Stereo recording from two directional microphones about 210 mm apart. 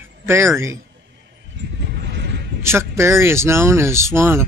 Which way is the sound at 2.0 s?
55° right (ahead or behind).